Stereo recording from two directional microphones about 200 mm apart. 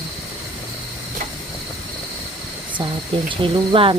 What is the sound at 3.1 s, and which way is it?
Speech, 25° right (ahead or behind).